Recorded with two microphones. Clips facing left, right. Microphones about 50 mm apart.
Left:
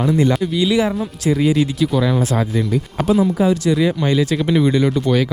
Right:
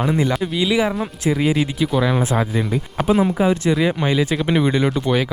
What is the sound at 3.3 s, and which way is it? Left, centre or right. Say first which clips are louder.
Speech: left 1 dB; right.